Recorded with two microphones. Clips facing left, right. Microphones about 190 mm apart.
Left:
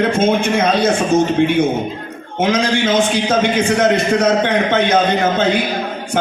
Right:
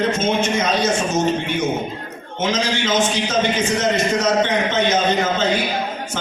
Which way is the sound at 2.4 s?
60° left (ahead or behind).